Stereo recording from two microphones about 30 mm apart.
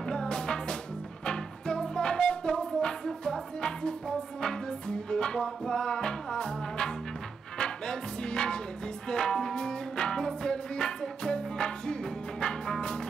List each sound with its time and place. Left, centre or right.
0.1 s music: left